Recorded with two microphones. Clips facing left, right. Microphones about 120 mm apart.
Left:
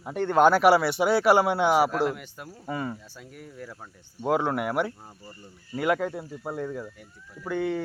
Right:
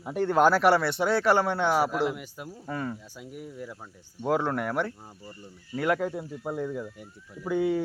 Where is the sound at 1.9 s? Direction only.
5° right (ahead or behind).